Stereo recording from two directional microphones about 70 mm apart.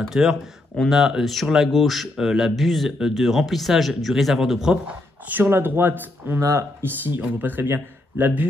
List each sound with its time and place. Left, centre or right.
0.1 s speech: centre
5.3 s speech: right